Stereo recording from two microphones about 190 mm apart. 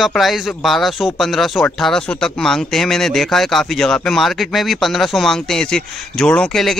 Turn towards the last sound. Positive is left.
turn(degrees=5)  # may be behind; listen again after turning